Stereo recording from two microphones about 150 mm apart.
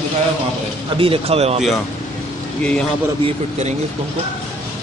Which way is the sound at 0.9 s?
35° right (ahead or behind).